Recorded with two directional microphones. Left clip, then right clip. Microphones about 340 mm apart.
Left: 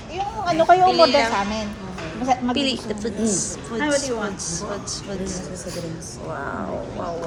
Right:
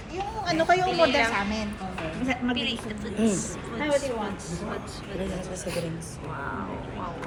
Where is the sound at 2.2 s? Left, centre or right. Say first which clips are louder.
Left 10 dB; left.